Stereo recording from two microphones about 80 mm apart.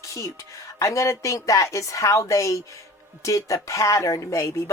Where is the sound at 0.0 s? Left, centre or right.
Left.